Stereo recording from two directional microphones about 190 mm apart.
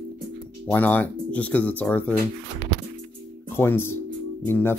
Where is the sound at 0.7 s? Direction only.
10° left (ahead or behind).